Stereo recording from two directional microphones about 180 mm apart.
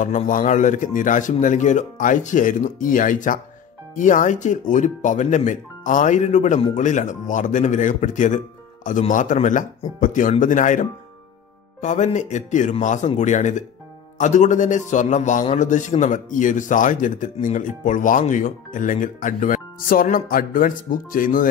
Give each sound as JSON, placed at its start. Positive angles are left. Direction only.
{"t": 0.0, "sound": "speech", "side_deg": 45}